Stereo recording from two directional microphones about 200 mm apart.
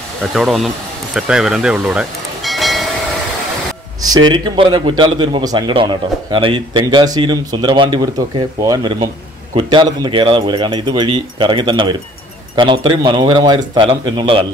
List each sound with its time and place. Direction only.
0.3 s speech: centre (ahead or behind)
1.1 s a sound: centre (ahead or behind)
4.3 s a man's voice: 25° right (ahead or behind)